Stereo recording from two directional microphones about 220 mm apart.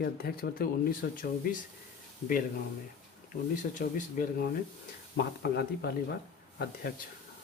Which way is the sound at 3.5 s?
35° left (ahead or behind).